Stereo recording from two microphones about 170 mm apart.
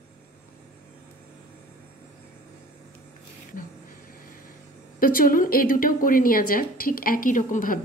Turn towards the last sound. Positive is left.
turn(degrees=50)  # may be behind; listen again after turning